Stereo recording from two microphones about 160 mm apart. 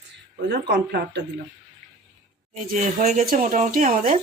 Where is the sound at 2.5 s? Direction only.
50° right (ahead or behind).